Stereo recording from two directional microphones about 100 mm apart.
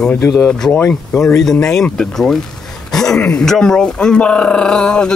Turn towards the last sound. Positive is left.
turn(degrees=10)  # may be behind; listen again after turning